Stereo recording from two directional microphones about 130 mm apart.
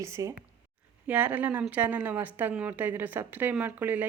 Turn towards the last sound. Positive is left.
turn(degrees=-15)  # may be behind; listen again after turning